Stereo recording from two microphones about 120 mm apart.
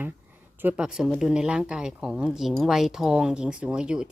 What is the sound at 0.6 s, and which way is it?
A woman's voice, 10° right (ahead or behind).